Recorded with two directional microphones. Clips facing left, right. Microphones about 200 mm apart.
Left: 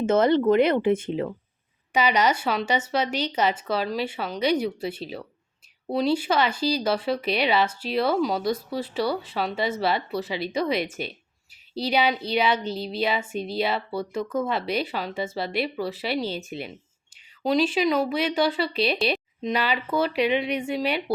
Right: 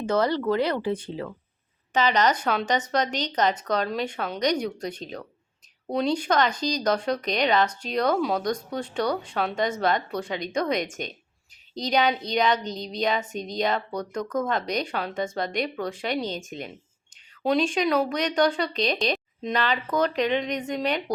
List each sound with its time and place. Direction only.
0.0 s speech: 25° left (ahead or behind)
1.9 s a woman's voice: 10° left (ahead or behind)